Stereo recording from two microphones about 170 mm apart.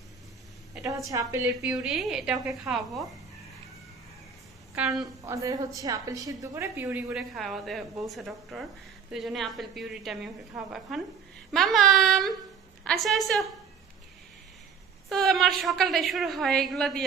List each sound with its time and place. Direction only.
1.1 s speech: 20° right (ahead or behind)
1.8 s a woman's voice: centre (ahead or behind)
4.7 s a woman's voice: 5° right (ahead or behind)
5.2 s a woman's voice: 20° right (ahead or behind); by 13.5 s centre (ahead or behind)
15.0 s a woman's voice: centre (ahead or behind)